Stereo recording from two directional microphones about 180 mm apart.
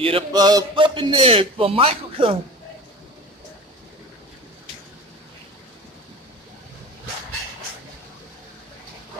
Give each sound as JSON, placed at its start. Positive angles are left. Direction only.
{"t": 0.0, "sound": "a man's voice", "side_deg": -25}